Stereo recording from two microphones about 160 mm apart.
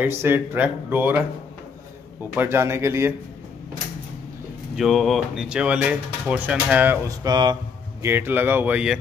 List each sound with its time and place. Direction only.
0.0 s speech: 15° right (ahead or behind)
2.3 s speech: 15° right (ahead or behind)
4.7 s speech: centre (ahead or behind)
7.2 s speech: 25° right (ahead or behind)
8.0 s speech: 15° right (ahead or behind)